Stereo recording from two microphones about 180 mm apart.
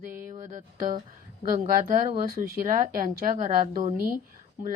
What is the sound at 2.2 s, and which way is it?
A woman's voice, 50° right (ahead or behind).